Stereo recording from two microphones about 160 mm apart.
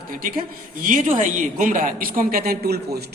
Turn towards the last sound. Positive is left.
turn(degrees=-80)